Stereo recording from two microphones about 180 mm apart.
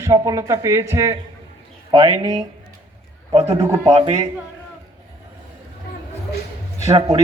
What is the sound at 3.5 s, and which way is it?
Speech, 20° right (ahead or behind).